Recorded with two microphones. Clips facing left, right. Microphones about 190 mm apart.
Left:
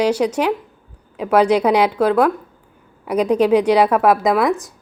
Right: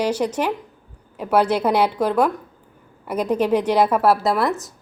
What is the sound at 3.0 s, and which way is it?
Speech, 10° left (ahead or behind).